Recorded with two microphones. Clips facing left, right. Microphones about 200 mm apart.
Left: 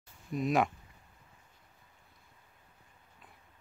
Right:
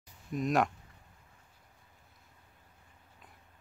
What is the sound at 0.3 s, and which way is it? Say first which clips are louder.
Speech: even; centre (ahead or behind).